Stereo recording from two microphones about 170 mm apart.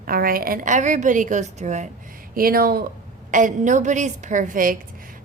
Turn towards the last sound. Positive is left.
turn(degrees=-55)  # may be behind; listen again after turning